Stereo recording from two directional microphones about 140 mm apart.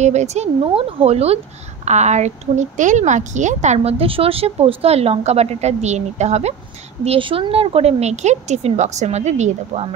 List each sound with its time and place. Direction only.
0.0 s speech: 55° right (ahead or behind)
7.1 s speech: 40° right (ahead or behind)